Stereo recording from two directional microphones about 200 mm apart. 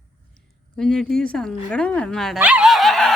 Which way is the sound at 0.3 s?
5° left (ahead or behind).